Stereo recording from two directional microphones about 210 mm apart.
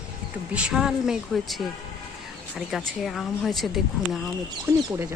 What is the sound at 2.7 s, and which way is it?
Speech, centre (ahead or behind).